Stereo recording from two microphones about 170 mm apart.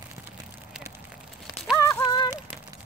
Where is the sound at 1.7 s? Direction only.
20° left (ahead or behind).